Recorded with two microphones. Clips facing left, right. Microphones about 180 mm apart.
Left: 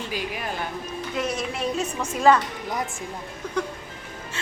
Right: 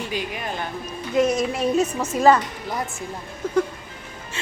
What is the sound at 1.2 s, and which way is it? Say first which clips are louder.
Speech: right 8 dB; 45° right (ahead or behind).